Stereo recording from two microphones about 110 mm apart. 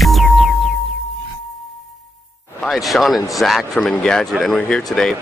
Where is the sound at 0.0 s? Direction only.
Centre (ahead or behind).